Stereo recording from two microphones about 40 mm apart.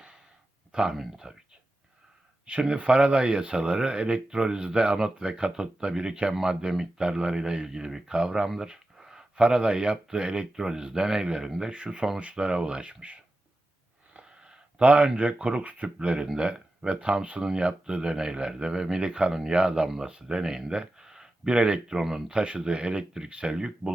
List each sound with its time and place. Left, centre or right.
0.7 s speech: centre
2.5 s speech: right; by 11.7 s centre
11.7 s speech: right
14.1 s a sound: right
16.0 s speech: right